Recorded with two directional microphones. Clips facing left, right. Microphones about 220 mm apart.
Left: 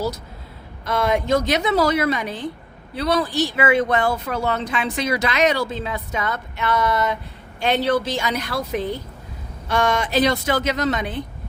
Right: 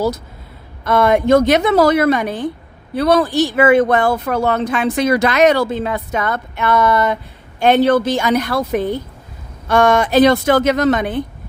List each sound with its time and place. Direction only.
0.9 s speech: 55° right (ahead or behind)